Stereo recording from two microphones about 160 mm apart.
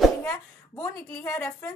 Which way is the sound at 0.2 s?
20° left (ahead or behind).